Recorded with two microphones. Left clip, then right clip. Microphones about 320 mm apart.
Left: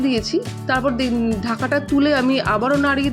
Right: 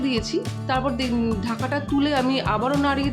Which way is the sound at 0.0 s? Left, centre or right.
Centre.